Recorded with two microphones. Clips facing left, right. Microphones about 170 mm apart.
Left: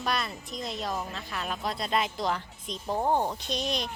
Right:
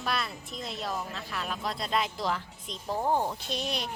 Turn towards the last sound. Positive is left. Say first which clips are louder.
# left 2 dB
turn(degrees=-5)  # may be behind; listen again after turning